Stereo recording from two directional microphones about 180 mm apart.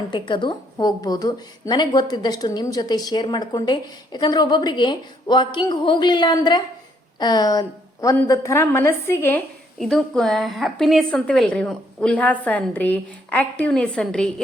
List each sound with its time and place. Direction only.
0.1 s a woman's voice: 25° left (ahead or behind)
9.7 s a woman's voice: centre (ahead or behind)